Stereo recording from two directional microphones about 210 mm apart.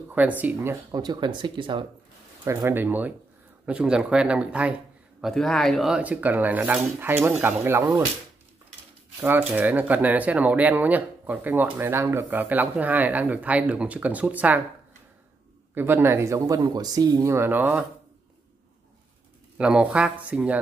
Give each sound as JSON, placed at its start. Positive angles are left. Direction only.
{"t": 0.1, "sound": "speech", "side_deg": -5}
{"t": 2.4, "sound": "speech", "side_deg": -10}
{"t": 9.5, "sound": "speech", "side_deg": -10}
{"t": 15.7, "sound": "speech", "side_deg": -10}
{"t": 19.6, "sound": "speech", "side_deg": -5}